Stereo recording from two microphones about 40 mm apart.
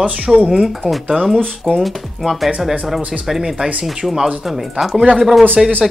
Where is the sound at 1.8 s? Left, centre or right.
Centre.